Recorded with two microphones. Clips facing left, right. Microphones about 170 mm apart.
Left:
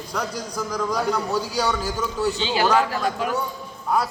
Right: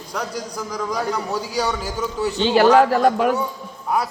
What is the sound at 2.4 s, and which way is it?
Speech, 60° right (ahead or behind).